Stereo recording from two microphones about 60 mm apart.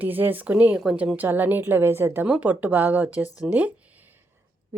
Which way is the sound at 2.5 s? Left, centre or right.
Right.